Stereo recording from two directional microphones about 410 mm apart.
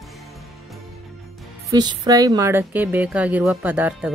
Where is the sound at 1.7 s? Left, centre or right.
Centre.